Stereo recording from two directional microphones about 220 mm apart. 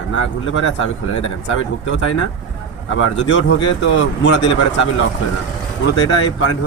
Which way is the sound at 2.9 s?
60° left (ahead or behind).